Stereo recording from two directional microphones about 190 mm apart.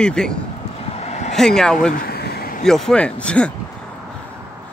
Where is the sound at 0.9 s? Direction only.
35° left (ahead or behind).